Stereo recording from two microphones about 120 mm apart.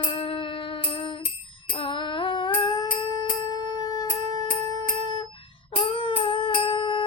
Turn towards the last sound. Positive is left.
turn(degrees=40)  # may be behind; listen again after turning